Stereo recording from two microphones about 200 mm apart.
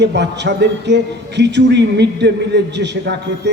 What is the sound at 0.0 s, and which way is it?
Speech, 60° right (ahead or behind).